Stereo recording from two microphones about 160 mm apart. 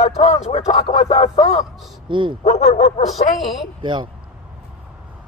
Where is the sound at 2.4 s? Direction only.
40° left (ahead or behind).